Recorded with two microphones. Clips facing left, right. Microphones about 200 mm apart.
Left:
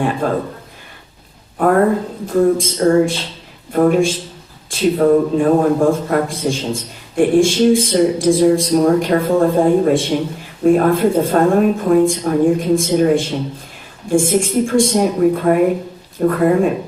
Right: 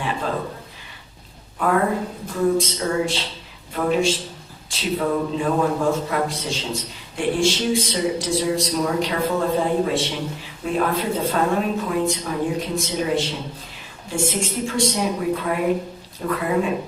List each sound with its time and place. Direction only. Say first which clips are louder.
0.2 s a man's voice: left 7 dB; 50° left (ahead or behind)
1.5 s a man's voice: left 7 dB; 50° left (ahead or behind)